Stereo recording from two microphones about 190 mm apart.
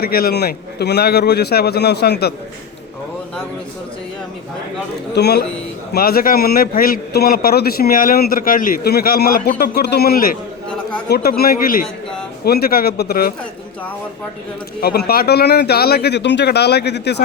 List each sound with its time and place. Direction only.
0.0 s a man's voice: 55° left (ahead or behind)
5.1 s a man's voice: 60° left (ahead or behind)
14.8 s a man's voice: 55° left (ahead or behind)